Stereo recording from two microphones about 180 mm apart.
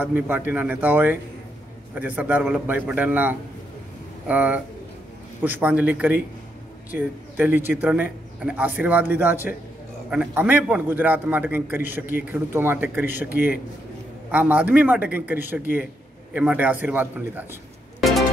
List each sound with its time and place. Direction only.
0.0 s speech: 10° right (ahead or behind)